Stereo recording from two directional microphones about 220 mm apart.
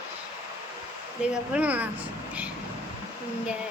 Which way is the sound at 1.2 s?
5° right (ahead or behind).